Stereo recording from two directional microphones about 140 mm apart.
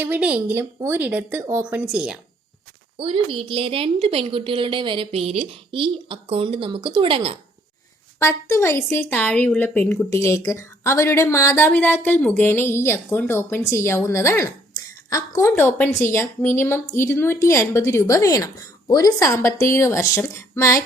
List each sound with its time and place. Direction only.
0.0 s speech: 10° right (ahead or behind)
1.6 s speech: 5° right (ahead or behind)
3.0 s a woman's voice: 40° right (ahead or behind)
8.2 s a woman's voice: 20° left (ahead or behind)